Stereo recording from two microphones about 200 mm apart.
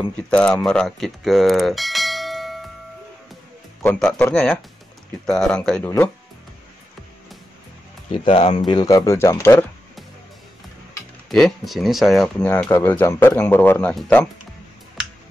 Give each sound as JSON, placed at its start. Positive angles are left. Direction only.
{"t": 0.6, "sound": "bell", "side_deg": 0}
{"t": 3.8, "sound": "speech", "side_deg": 10}
{"t": 8.1, "sound": "speech", "side_deg": 30}
{"t": 11.2, "sound": "speech", "side_deg": 0}